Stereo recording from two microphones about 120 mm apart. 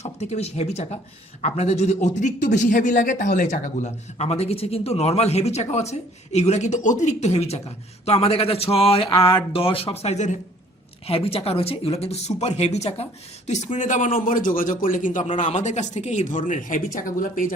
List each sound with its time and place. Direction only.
0.0 s a man's voice: 65° left (ahead or behind)
11.0 s speech: 55° left (ahead or behind)
13.5 s speech: 80° left